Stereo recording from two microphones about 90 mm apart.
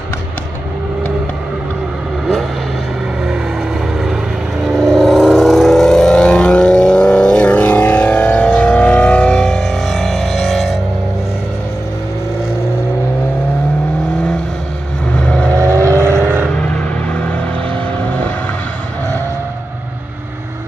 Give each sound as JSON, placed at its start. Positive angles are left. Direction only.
{"t": 4.6, "sound": "vehicle", "side_deg": 0}
{"t": 15.1, "sound": "vehicle", "side_deg": 15}
{"t": 15.7, "sound": "vehicle", "side_deg": -35}